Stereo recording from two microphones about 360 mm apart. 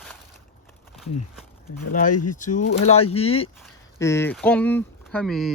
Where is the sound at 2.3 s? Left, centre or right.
Left; by 5.5 s centre.